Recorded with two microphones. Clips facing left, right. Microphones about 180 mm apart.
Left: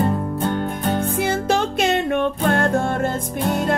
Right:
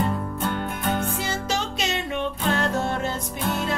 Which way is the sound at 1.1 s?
55° left (ahead or behind).